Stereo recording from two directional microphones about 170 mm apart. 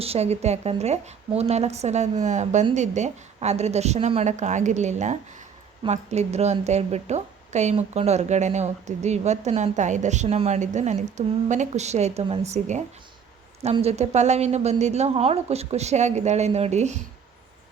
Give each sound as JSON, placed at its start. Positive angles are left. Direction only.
{"t": 0.0, "sound": "a woman's voice", "side_deg": -35}